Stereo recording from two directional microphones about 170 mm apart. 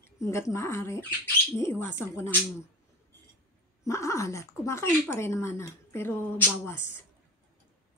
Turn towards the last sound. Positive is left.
turn(degrees=15)  # may be behind; listen again after turning